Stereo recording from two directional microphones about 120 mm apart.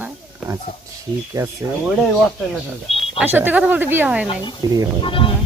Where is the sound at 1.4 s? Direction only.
30° right (ahead or behind).